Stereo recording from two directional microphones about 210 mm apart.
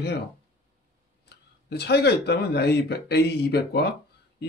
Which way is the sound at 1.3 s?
50° left (ahead or behind).